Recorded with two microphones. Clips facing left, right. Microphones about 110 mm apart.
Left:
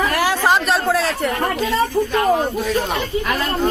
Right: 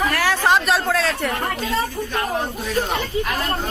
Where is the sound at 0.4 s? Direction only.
Centre (ahead or behind).